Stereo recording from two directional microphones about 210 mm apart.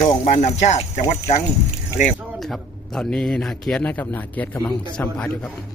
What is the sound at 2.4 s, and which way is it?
A man's voice, centre (ahead or behind).